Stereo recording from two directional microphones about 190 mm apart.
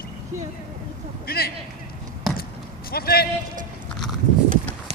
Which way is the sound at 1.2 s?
55° left (ahead or behind).